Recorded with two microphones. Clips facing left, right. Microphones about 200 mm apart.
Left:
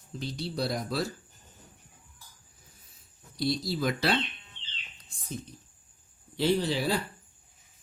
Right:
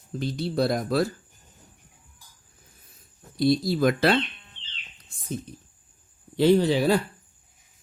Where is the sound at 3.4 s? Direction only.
50° right (ahead or behind).